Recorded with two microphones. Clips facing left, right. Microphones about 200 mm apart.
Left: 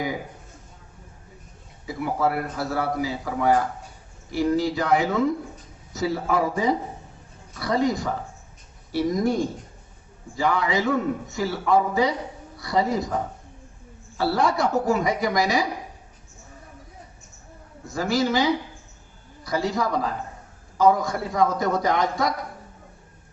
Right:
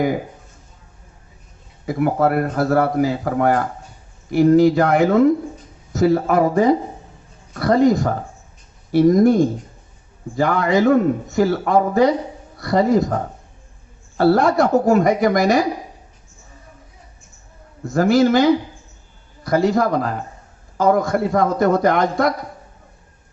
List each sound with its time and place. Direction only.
1.9 s a man's voice: 55° right (ahead or behind)
14.2 s a man's voice: 55° right (ahead or behind)
17.9 s a man's voice: 55° right (ahead or behind)